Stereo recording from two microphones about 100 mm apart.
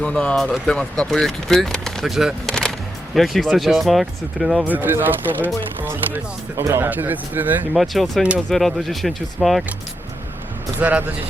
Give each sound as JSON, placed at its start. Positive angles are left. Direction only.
{"t": 0.0, "sound": "speech", "side_deg": 10}
{"t": 4.6, "sound": "speech", "side_deg": -20}
{"t": 7.7, "sound": "speech", "side_deg": 0}
{"t": 10.8, "sound": "speech", "side_deg": -15}